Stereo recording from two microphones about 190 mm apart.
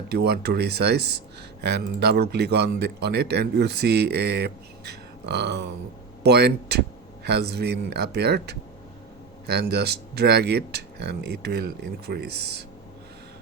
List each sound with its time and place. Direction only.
0.1 s speech: 55° right (ahead or behind)